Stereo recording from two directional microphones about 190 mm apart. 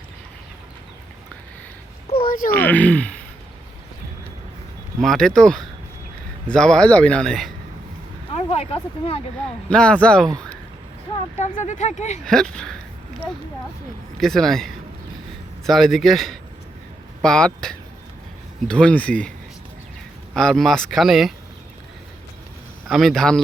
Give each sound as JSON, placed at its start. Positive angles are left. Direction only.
{"t": 2.2, "sound": "a sound", "side_deg": 50}
{"t": 2.5, "sound": "speech", "side_deg": 10}
{"t": 4.9, "sound": "speech", "side_deg": 0}
{"t": 8.3, "sound": "speech", "side_deg": 30}
{"t": 9.6, "sound": "speech", "side_deg": 5}
{"t": 11.3, "sound": "speech", "side_deg": 40}
{"t": 12.2, "sound": "speech", "side_deg": 5}
{"t": 14.2, "sound": "speech", "side_deg": 0}
{"t": 20.3, "sound": "speech", "side_deg": 5}
{"t": 22.9, "sound": "speech", "side_deg": 0}